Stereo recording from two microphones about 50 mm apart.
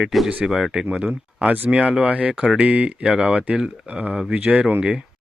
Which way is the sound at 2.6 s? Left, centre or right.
Right.